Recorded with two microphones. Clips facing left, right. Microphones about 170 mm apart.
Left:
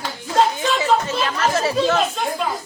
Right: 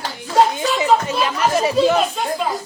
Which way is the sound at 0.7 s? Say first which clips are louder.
Right 3 dB; 15° right (ahead or behind).